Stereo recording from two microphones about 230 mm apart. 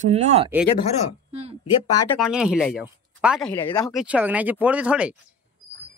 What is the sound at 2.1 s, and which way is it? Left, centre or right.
A woman's voice, centre.